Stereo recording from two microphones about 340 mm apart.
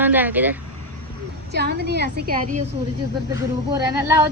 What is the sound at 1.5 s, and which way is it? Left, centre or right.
A woman's voice, right.